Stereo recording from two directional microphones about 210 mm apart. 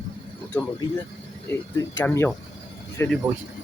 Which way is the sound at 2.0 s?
10° left (ahead or behind).